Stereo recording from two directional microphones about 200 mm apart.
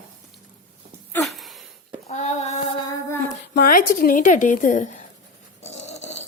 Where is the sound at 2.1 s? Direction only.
35° left (ahead or behind).